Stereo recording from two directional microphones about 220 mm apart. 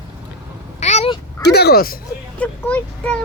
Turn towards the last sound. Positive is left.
turn(degrees=5)  # may be behind; listen again after turning